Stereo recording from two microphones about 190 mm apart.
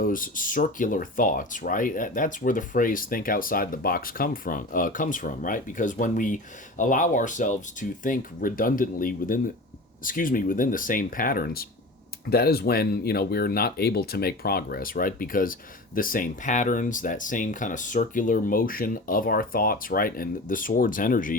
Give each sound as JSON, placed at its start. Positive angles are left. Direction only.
{"t": 0.0, "sound": "speech", "side_deg": 45}